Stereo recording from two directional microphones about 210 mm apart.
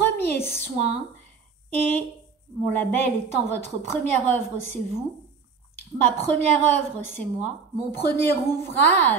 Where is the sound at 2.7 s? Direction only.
10° left (ahead or behind).